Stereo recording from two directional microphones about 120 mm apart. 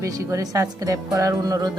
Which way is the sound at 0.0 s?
25° right (ahead or behind).